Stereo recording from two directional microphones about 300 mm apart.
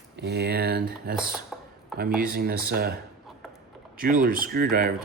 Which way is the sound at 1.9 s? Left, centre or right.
Right.